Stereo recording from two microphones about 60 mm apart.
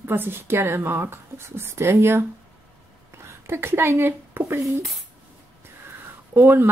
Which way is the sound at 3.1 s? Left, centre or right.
Right.